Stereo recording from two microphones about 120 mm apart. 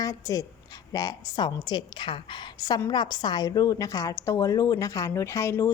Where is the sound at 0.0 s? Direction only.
30° left (ahead or behind).